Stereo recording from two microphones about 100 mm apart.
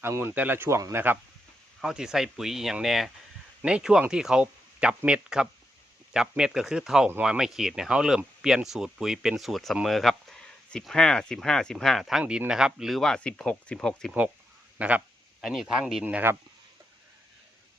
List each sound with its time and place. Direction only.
0.0 s speech: 25° right (ahead or behind)
1.8 s speech: 5° right (ahead or behind)
12.2 s speech: 10° right (ahead or behind); by 14.2 s 5° left (ahead or behind)
14.8 s speech: 15° right (ahead or behind)
16.0 s speech: 15° right (ahead or behind)